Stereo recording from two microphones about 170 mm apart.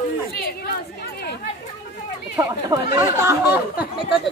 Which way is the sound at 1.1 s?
65° left (ahead or behind).